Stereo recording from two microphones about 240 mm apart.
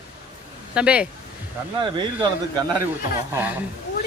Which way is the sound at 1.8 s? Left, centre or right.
Centre.